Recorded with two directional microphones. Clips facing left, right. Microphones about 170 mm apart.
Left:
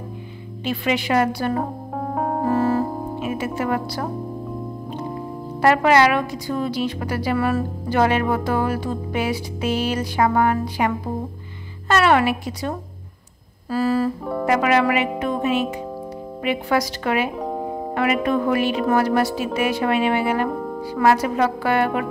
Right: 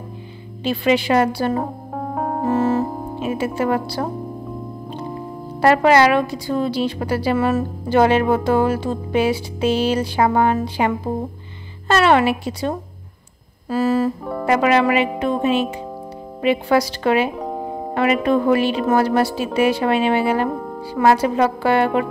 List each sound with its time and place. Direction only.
0.7 s a woman's voice: 30° right (ahead or behind)
2.0 s music: centre (ahead or behind)
2.4 s music: 25° right (ahead or behind)
5.6 s a woman's voice: 30° right (ahead or behind)
11.9 s a woman's voice: 25° right (ahead or behind)
17.4 s music: centre (ahead or behind)
17.9 s a woman's voice: 30° right (ahead or behind)
20.5 s music: centre (ahead or behind)
20.8 s a woman's voice: 25° right (ahead or behind)